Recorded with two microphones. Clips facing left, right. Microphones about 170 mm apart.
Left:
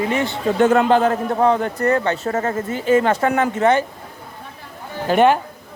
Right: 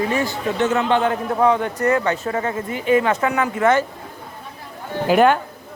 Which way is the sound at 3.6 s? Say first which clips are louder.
Even; 20° left (ahead or behind).